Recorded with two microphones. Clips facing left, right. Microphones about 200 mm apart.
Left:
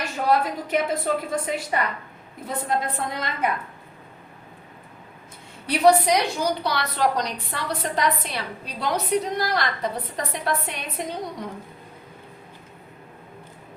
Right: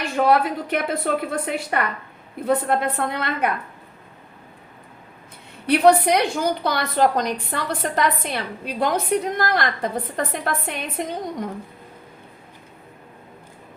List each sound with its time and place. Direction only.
0.3 s a woman's voice: 60° right (ahead or behind)
5.6 s a woman's voice: 55° right (ahead or behind)